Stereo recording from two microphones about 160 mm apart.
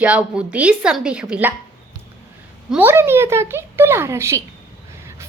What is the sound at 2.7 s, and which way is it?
Speech, 10° right (ahead or behind).